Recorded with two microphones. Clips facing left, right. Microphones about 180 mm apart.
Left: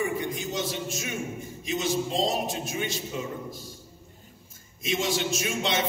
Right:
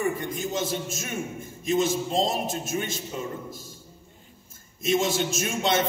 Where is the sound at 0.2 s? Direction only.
45° right (ahead or behind).